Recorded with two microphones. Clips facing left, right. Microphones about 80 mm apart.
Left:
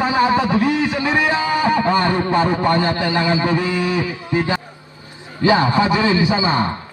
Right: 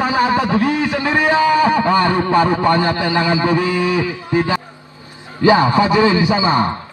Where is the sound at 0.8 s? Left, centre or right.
Left.